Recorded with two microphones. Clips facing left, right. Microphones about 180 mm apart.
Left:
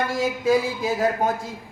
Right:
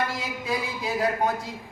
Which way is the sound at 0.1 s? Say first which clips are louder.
Left 10 dB; 45° left (ahead or behind).